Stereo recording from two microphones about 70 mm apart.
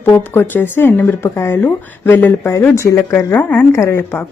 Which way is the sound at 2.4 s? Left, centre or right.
Left.